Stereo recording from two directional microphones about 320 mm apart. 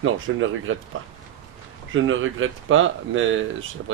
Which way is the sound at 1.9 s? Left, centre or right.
Right.